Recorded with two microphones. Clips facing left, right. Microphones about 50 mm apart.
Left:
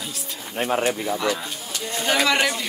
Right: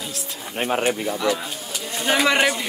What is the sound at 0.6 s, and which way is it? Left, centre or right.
Speech, right.